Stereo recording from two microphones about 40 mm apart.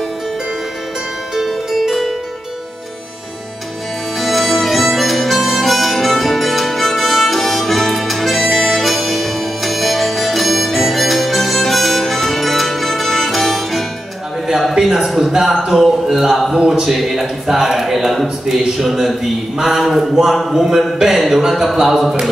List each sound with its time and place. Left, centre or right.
1.3 s music: centre
4.2 s harmonica: centre
14.5 s a sound: centre
16.5 s speech: centre
16.9 s speech: centre